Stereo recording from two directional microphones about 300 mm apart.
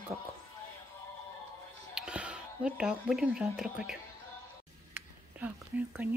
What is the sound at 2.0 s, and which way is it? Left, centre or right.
Speech, centre.